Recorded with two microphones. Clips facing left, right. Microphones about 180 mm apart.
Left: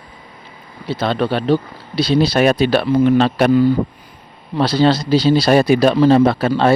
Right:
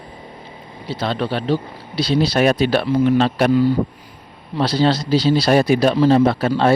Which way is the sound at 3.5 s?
50° left (ahead or behind).